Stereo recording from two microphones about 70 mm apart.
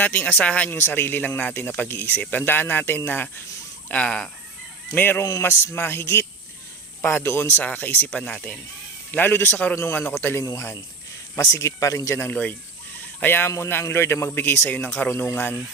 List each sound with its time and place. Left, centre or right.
0.0 s speech: left
0.8 s a man's voice: left
3.8 s speech: centre
4.9 s a man's voice: left
7.5 s speech: left
9.1 s a man's voice: left
10.4 s speech: left
12.2 s a man's voice: left